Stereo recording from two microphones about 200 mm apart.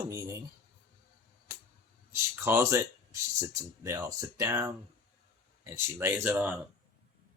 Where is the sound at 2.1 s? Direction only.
15° right (ahead or behind).